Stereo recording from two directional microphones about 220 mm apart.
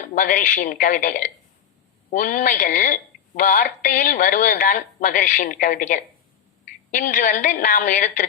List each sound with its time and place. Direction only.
0.1 s speech: 40° left (ahead or behind)